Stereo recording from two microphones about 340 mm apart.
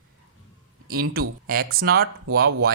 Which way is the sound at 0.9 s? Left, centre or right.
Right.